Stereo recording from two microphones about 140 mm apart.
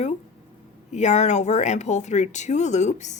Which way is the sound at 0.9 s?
55° left (ahead or behind).